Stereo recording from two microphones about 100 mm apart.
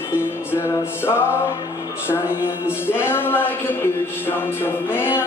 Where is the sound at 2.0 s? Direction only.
25° left (ahead or behind).